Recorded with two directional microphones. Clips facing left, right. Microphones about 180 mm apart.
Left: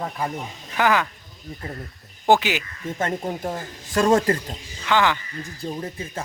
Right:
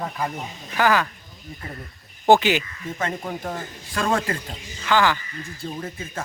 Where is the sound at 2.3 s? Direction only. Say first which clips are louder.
Right 2 dB; 5° left (ahead or behind).